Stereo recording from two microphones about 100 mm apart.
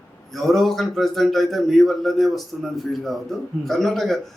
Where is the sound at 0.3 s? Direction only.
Centre (ahead or behind).